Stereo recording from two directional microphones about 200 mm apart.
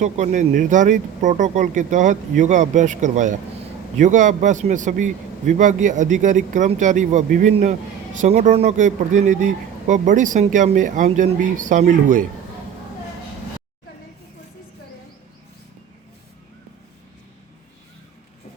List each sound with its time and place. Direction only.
0.0 s speech: 35° right (ahead or behind)